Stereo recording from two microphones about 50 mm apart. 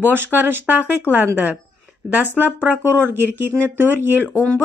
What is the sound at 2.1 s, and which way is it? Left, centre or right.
Speech, right.